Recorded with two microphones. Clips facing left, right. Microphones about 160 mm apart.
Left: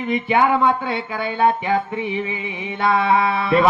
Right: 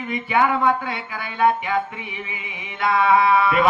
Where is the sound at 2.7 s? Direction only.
30° left (ahead or behind).